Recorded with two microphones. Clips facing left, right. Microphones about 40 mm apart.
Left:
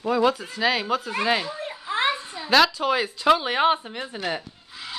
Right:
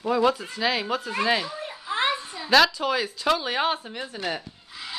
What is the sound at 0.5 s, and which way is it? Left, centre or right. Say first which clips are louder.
A child's voice: left 2 dB; centre.